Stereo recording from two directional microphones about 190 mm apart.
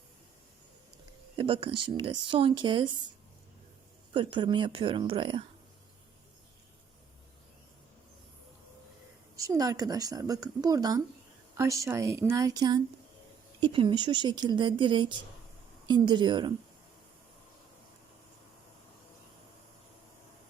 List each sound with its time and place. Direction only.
1.4 s speech: 25° right (ahead or behind)
4.1 s speech: 25° right (ahead or behind)
9.3 s a woman's voice: 15° right (ahead or behind)